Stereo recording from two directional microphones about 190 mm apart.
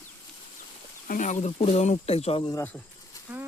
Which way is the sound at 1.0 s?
45° left (ahead or behind).